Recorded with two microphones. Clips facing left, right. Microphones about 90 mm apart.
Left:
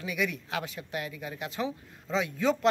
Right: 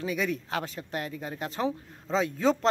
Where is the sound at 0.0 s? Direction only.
35° right (ahead or behind).